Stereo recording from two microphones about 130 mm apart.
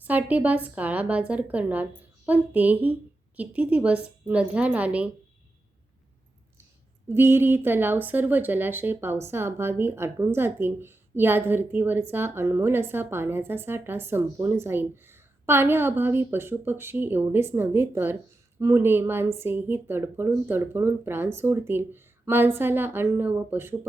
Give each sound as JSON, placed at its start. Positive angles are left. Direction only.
{"t": 0.0, "sound": "speech", "side_deg": -10}
{"t": 7.1, "sound": "speech", "side_deg": -20}